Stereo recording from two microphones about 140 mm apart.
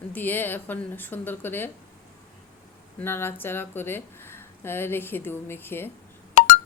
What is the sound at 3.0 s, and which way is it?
A woman's voice, 15° left (ahead or behind).